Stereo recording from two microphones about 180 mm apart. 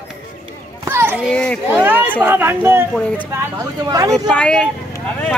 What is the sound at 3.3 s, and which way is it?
Speech, 20° right (ahead or behind).